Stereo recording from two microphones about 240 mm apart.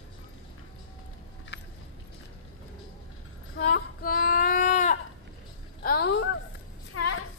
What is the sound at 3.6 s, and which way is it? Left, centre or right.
Child singing, left.